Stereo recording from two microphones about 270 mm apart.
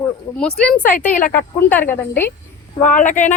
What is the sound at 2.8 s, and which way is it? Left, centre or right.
Speech, left.